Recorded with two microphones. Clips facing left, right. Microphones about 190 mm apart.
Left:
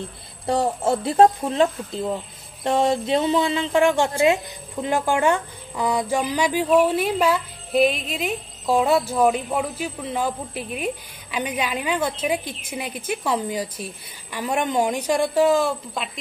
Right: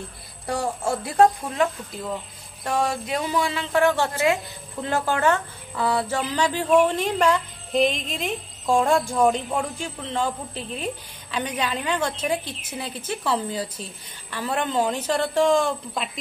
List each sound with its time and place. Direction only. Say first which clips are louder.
0.5 s speech: left 4 dB; 20° left (ahead or behind); by 16.1 s centre (ahead or behind)